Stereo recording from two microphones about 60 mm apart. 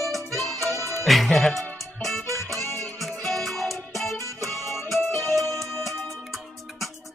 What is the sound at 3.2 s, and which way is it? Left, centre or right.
Music, centre.